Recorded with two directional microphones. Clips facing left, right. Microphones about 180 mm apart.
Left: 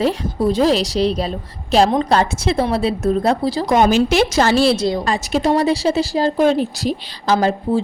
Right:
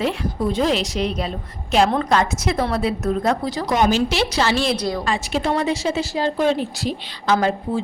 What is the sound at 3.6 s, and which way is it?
A woman's voice, 50° left (ahead or behind).